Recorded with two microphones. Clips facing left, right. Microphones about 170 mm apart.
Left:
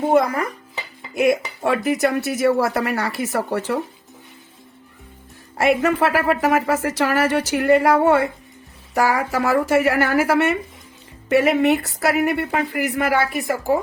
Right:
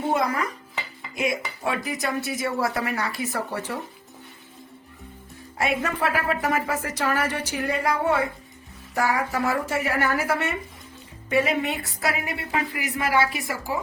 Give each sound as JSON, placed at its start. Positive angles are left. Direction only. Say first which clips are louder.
{"t": 0.1, "sound": "a woman's voice", "louder": "left 7 dB", "side_deg": 55}
{"t": 5.5, "sound": "speech", "louder": "left 8 dB", "side_deg": 80}
{"t": 11.3, "sound": "a woman's voice", "louder": "left 7 dB", "side_deg": 70}